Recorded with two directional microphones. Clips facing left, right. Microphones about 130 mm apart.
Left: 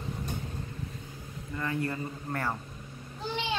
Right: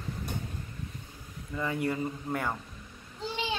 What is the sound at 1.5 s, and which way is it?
A man's voice, 10° right (ahead or behind).